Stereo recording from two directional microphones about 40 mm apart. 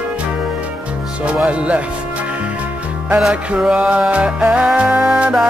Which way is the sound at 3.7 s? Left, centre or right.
Right.